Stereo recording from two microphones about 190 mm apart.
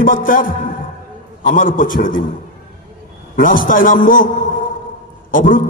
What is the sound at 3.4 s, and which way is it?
Speech, 45° left (ahead or behind).